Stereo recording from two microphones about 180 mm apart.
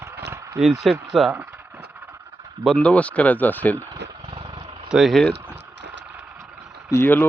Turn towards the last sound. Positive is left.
turn(degrees=10)  # may be behind; listen again after turning